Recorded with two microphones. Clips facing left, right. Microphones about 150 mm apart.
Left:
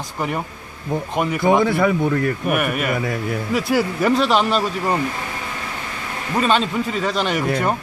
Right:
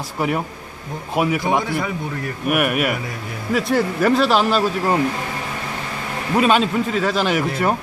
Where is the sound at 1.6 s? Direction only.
55° left (ahead or behind).